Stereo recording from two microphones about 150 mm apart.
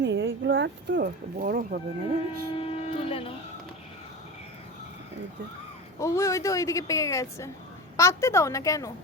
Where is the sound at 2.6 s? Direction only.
40° left (ahead or behind).